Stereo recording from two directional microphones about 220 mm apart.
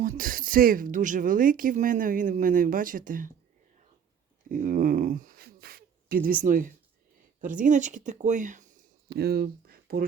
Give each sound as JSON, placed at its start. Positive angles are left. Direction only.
{"t": 0.0, "sound": "speech", "side_deg": -40}
{"t": 4.4, "sound": "speech", "side_deg": -40}
{"t": 9.1, "sound": "speech", "side_deg": -45}